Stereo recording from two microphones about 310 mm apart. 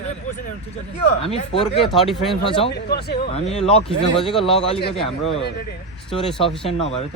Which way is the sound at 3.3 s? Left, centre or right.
Left.